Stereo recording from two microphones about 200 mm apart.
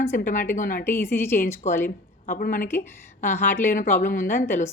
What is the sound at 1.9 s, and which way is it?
Speech, 45° left (ahead or behind).